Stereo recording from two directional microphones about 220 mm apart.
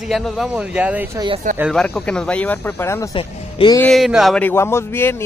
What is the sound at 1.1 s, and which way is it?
Speech, 20° right (ahead or behind).